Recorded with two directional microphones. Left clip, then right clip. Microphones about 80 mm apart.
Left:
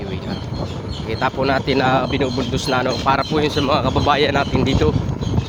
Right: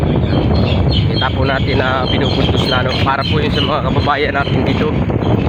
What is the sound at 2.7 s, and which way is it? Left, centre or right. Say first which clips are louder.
Speech: left 1 dB; left.